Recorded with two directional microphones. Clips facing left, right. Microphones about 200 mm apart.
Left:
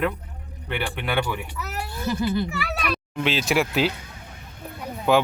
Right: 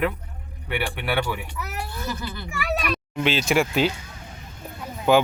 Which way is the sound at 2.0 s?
25° left (ahead or behind).